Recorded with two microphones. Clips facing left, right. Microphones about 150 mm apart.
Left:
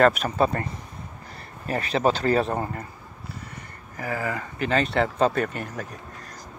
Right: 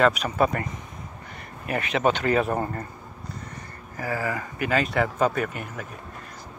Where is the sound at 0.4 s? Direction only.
30° left (ahead or behind).